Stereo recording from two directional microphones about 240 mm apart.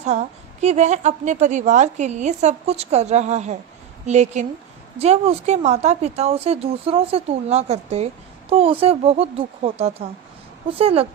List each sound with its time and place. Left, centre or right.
0.0 s speech: right